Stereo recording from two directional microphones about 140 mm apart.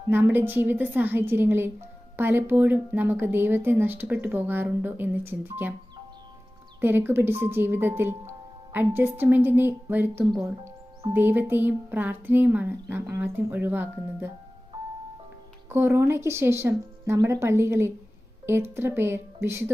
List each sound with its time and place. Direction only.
0.1 s a woman's voice: 15° right (ahead or behind)
6.8 s a woman's voice: 15° right (ahead or behind)
15.7 s a woman's voice: 15° right (ahead or behind)